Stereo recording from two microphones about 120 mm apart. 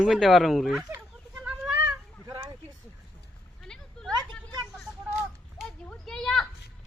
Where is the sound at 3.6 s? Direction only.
5° left (ahead or behind).